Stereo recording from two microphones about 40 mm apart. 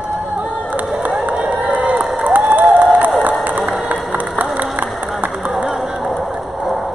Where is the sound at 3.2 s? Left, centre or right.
Right.